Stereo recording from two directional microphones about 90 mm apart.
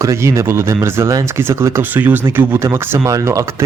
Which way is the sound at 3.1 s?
35° right (ahead or behind).